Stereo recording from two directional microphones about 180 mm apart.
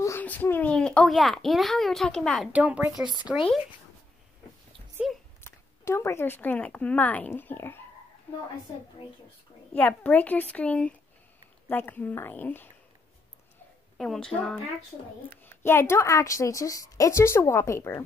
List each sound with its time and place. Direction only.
0.0 s a child's voice: 10° left (ahead or behind)
2.5 s speech: 10° right (ahead or behind)
5.4 s speech: 15° left (ahead or behind)
9.8 s a woman's voice: 10° left (ahead or behind)
13.9 s speech: 5° left (ahead or behind)
15.4 s a woman's voice: 15° left (ahead or behind)